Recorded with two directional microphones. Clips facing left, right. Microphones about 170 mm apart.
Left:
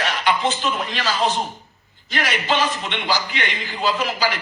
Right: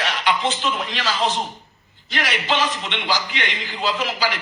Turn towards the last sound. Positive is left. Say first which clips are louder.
# left 1 dB
turn(degrees=45)  # may be behind; listen again after turning